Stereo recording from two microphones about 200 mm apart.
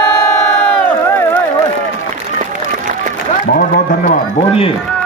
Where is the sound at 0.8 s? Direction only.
10° left (ahead or behind).